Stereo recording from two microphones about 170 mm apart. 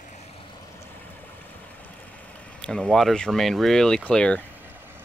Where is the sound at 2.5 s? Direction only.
5° left (ahead or behind).